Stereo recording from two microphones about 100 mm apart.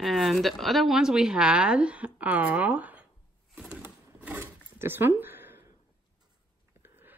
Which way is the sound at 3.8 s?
15° right (ahead or behind).